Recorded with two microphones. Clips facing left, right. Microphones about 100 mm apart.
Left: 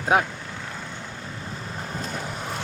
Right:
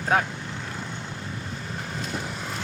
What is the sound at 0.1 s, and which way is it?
Speech, 10° left (ahead or behind).